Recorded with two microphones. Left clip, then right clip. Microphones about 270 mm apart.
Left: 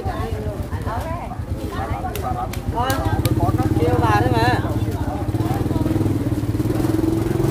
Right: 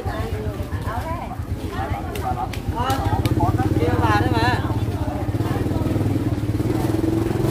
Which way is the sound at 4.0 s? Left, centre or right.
Centre.